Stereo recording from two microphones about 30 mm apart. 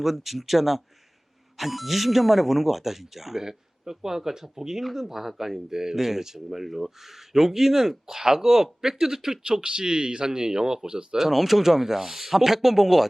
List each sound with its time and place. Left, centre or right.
0.0 s speech: centre
9.4 s a man's voice: right
11.2 s speech: centre